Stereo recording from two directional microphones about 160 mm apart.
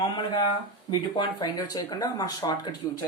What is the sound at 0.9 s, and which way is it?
Speech, 30° left (ahead or behind).